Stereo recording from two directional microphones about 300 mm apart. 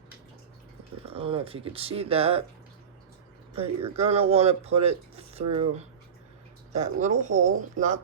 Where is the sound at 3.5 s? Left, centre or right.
Centre.